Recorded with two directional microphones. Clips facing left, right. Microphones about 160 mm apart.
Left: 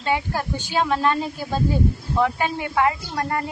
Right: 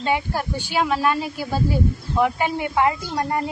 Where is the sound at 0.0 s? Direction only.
15° right (ahead or behind).